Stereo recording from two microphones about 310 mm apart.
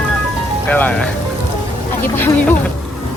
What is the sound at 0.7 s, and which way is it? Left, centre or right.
Speech, centre.